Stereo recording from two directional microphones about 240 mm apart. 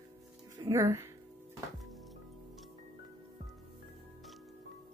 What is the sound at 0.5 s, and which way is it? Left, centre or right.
Speech, centre.